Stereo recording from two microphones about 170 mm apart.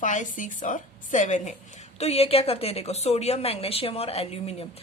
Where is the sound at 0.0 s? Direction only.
50° left (ahead or behind).